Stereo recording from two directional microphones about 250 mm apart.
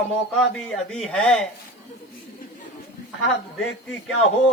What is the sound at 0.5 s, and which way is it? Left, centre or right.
Speech, centre.